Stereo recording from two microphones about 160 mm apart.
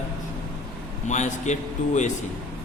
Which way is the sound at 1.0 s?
50° left (ahead or behind).